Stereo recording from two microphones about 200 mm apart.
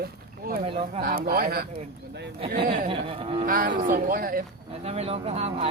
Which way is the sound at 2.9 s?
25° right (ahead or behind).